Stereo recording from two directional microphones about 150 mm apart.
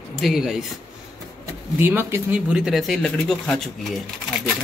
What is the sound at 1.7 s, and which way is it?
A man's voice, 15° right (ahead or behind).